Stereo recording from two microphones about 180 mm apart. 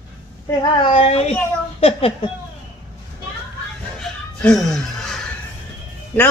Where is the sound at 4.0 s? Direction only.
Centre (ahead or behind).